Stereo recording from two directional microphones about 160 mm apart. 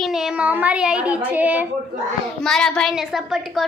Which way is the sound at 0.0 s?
Centre (ahead or behind).